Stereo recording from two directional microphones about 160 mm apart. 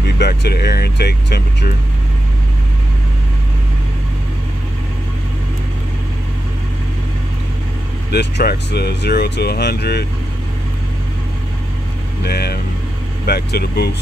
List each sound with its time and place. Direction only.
0.2 s speech: 90° left
8.1 s speech: 90° left
12.2 s speech: 85° left